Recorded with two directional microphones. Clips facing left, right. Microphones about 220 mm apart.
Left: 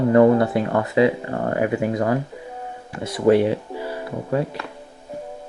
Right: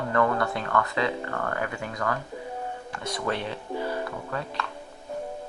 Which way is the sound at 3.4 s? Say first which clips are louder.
Left 11 dB; 10° left (ahead or behind).